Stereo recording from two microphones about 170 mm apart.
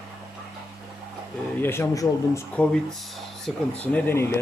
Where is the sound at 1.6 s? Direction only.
15° left (ahead or behind).